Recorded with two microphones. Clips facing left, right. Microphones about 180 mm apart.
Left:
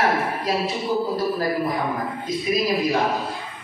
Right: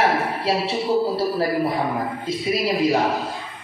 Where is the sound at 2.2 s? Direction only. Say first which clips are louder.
Left 1 dB; 30° right (ahead or behind).